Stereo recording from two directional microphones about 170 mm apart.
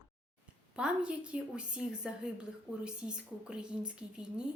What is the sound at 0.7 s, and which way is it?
A woman's voice, 5° right (ahead or behind).